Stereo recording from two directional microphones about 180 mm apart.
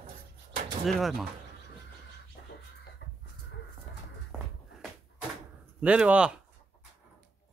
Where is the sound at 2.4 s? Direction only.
60° left (ahead or behind).